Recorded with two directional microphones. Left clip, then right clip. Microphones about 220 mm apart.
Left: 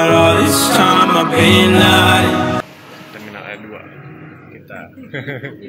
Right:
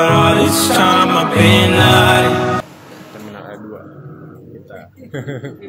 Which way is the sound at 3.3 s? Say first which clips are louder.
Left 4 dB; 10° right (ahead or behind).